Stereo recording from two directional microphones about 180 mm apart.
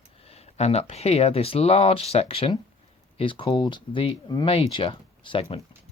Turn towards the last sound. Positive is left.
turn(degrees=30)  # may be behind; listen again after turning